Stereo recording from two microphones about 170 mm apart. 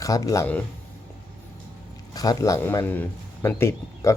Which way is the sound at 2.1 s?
20° left (ahead or behind).